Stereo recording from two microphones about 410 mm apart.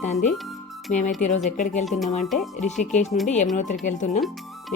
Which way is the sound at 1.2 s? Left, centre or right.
Centre.